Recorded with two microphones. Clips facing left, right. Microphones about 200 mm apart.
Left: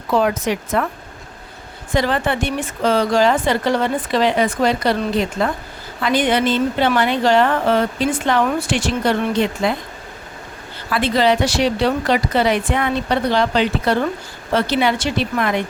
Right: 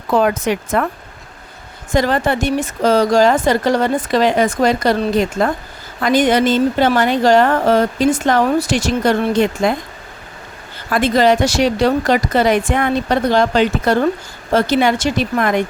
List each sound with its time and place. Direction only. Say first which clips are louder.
0.1 s a woman's voice: right 2 dB; 50° right (ahead or behind)
1.9 s a woman's voice: right 3 dB; 45° right (ahead or behind)
10.8 s a woman's voice: right 3 dB; 45° right (ahead or behind)